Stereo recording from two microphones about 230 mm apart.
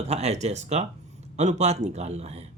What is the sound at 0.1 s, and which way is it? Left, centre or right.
Speech, right.